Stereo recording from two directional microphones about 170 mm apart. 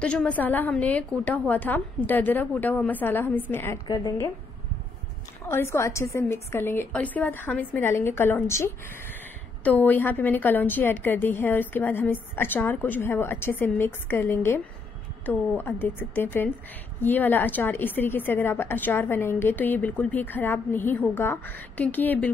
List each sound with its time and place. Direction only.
0.0 s a woman's voice: 5° left (ahead or behind)
3.8 s a woman's voice: 25° left (ahead or behind)
5.5 s a woman's voice: 15° left (ahead or behind)